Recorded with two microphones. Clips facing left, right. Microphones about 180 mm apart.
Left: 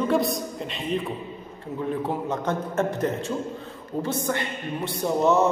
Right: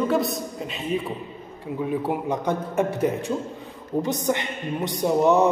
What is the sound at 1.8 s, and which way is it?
A man's voice, 10° right (ahead or behind).